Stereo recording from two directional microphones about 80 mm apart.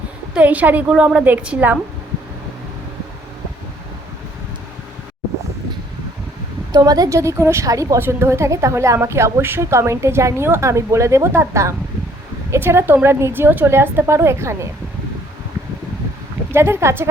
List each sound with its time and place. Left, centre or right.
0.3 s a woman's voice: centre
6.7 s a woman's voice: right
7.2 s a woman's voice: right
7.9 s a woman's voice: right
16.5 s a woman's voice: right